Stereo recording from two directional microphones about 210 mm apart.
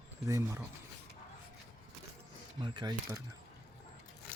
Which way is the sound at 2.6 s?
20° right (ahead or behind).